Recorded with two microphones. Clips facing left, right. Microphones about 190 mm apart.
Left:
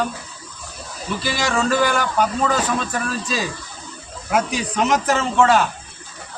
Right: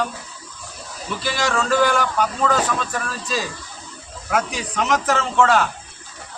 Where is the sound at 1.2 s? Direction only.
10° left (ahead or behind).